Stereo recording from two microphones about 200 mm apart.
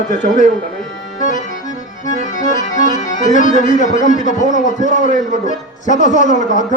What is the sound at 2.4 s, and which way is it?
Music, 40° left (ahead or behind).